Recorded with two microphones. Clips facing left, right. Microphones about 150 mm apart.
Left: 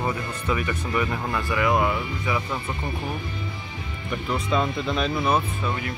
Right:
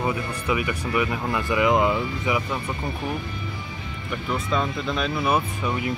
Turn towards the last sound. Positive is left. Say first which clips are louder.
# right 2 dB
turn(degrees=-15)  # may be behind; listen again after turning